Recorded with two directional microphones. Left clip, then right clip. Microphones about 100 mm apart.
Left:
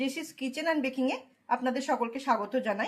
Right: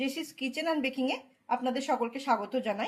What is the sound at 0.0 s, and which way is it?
A woman's voice, 25° right (ahead or behind).